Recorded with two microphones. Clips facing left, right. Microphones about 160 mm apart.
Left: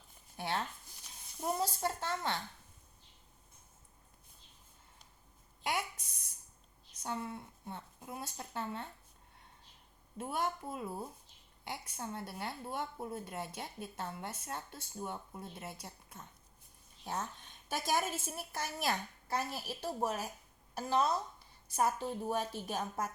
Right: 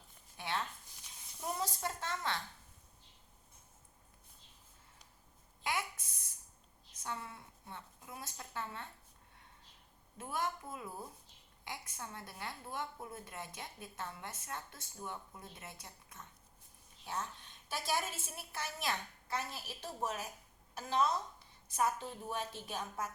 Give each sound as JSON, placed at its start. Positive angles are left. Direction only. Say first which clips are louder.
{"t": 0.3, "sound": "speech", "louder": "left 2 dB", "side_deg": 40}
{"t": 7.0, "sound": "speech", "louder": "left 5 dB", "side_deg": 30}
{"t": 10.2, "sound": "speech", "louder": "left 3 dB", "side_deg": 30}
{"t": 17.1, "sound": "a woman's voice", "louder": "left 2 dB", "side_deg": 45}